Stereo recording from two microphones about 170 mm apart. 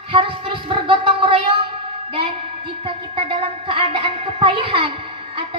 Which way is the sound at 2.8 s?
35° right (ahead or behind).